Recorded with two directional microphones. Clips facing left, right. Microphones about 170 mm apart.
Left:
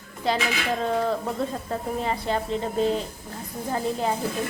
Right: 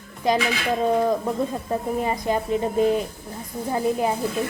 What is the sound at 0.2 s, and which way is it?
Speech, 15° right (ahead or behind).